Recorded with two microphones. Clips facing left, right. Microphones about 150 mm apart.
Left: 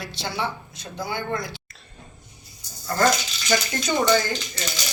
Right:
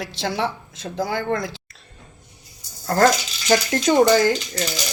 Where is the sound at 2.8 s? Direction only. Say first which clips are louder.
Right 4 dB; 70° right (ahead or behind).